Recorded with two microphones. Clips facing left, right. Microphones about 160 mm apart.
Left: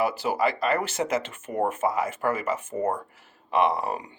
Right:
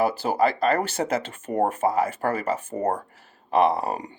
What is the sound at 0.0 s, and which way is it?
Speech, 30° right (ahead or behind).